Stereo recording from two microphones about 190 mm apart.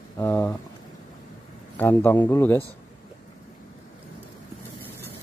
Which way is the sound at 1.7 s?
10° left (ahead or behind).